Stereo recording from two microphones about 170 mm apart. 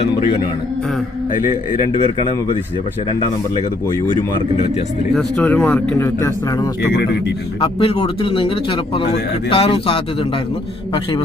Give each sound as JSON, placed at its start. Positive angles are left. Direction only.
{"t": 1.9, "sound": "speech", "side_deg": 30}
{"t": 5.1, "sound": "speech", "side_deg": 5}
{"t": 7.6, "sound": "a man's voice", "side_deg": 35}